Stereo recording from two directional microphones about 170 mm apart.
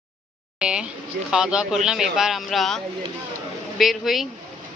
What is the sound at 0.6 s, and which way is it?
Speech, 5° right (ahead or behind).